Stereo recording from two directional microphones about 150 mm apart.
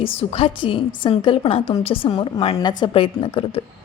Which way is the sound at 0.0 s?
40° left (ahead or behind).